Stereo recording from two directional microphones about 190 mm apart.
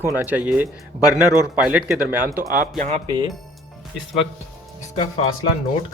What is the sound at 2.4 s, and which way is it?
Speech, 45° right (ahead or behind).